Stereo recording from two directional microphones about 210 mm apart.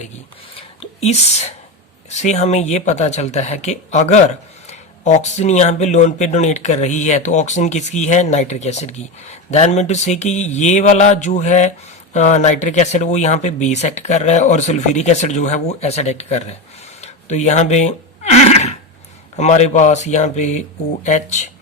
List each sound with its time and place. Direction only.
0.8 s speech: 30° left (ahead or behind)
17.0 s a sound: 35° left (ahead or behind)
19.4 s speech: 35° left (ahead or behind)